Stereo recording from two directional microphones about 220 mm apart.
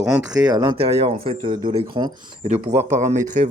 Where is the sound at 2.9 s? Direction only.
30° right (ahead or behind).